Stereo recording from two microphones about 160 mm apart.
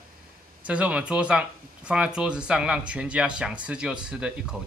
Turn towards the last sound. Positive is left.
turn(degrees=-5)  # may be behind; listen again after turning